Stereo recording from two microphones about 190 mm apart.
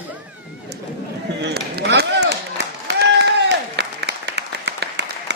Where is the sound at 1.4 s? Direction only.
60° right (ahead or behind).